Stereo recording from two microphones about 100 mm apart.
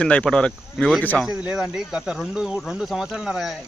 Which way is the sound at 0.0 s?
10° left (ahead or behind).